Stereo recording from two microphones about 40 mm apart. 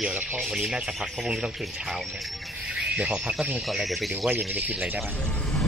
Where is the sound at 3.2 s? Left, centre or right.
Centre.